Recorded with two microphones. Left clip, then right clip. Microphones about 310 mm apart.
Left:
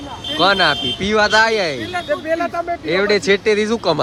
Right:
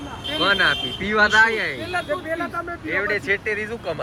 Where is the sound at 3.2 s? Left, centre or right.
Centre.